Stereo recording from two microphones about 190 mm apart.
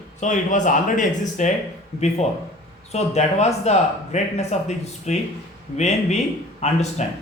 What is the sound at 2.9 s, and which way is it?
Speech, 35° left (ahead or behind).